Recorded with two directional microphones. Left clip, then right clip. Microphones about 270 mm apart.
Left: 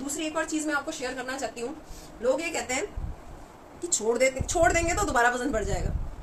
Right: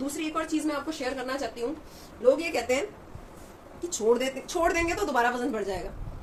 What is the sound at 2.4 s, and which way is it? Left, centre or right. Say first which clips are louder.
Speech: right 3 dB; centre.